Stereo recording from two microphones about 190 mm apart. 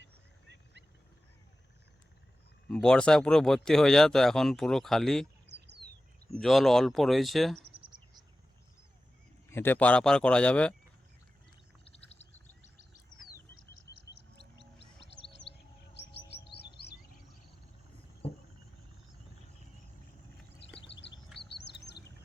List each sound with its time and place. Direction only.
0.0 s a sound: 65° right (ahead or behind)
2.6 s speech: 5° left (ahead or behind)
6.4 s speech: centre (ahead or behind)
7.7 s insect: 25° right (ahead or behind)
9.5 s speech: 10° left (ahead or behind)
15.5 s chirp: 30° left (ahead or behind)
16.0 s chirp: 60° left (ahead or behind)
18.2 s a sound: 30° left (ahead or behind)
20.8 s a sound: 70° left (ahead or behind)
21.3 s chirp: 65° left (ahead or behind)